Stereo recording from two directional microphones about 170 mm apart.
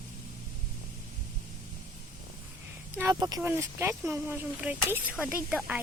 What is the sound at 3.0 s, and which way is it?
Speech, 20° right (ahead or behind).